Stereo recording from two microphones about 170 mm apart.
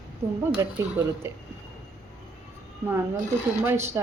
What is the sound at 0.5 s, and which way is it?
Speech, 15° right (ahead or behind).